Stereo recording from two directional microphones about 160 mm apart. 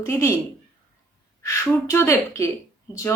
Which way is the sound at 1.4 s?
15° left (ahead or behind).